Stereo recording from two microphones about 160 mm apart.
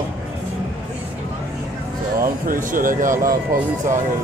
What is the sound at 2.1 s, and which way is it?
Speech, 60° right (ahead or behind).